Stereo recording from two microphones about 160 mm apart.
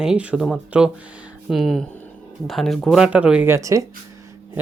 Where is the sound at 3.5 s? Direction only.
20° right (ahead or behind).